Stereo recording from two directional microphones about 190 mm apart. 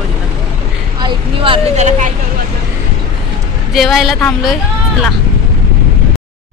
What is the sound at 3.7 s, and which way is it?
Speech, centre (ahead or behind).